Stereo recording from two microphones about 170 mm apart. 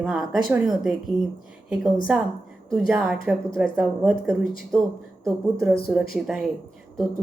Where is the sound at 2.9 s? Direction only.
Centre (ahead or behind).